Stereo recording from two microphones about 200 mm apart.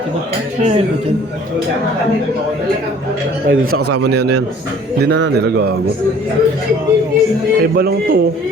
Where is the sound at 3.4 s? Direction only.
85° right.